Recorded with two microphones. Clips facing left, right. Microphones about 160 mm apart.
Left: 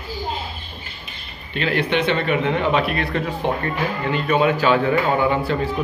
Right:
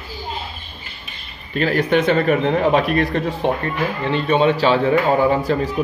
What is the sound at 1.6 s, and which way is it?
A man's voice, 45° right (ahead or behind).